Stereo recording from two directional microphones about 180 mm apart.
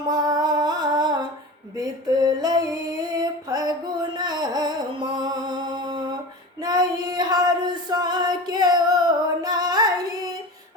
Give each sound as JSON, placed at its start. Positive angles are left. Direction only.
{"t": 0.1, "sound": "music", "side_deg": -20}
{"t": 1.7, "sound": "a sound", "side_deg": -20}
{"t": 3.2, "sound": "music", "side_deg": -20}